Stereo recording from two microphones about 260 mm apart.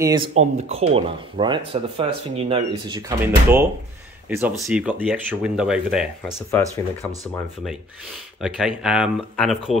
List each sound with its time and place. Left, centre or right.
0.0 s speech: centre
0.3 s speech: right
3.2 s speech: centre
8.4 s speech: centre